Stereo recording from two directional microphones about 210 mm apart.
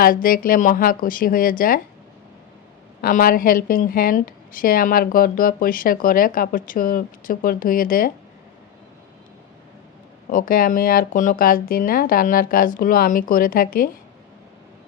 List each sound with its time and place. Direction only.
0.0 s a woman's voice: 45° left (ahead or behind)
3.0 s a woman's voice: 45° left (ahead or behind)
10.2 s a woman's voice: 40° left (ahead or behind)